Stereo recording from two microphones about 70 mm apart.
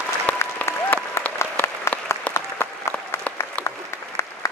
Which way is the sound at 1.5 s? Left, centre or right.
Left.